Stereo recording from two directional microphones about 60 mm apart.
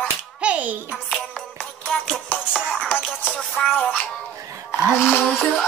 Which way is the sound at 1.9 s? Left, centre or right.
Centre.